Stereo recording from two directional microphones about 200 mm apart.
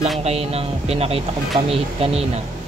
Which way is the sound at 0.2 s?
30° right (ahead or behind).